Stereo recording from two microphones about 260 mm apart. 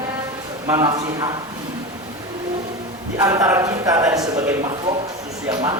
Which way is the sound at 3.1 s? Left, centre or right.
Centre.